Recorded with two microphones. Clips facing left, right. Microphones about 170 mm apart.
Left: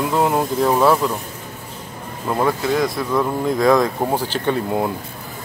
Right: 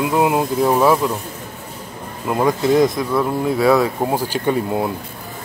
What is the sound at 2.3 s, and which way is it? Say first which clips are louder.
Speech: right 3 dB; 10° right (ahead or behind).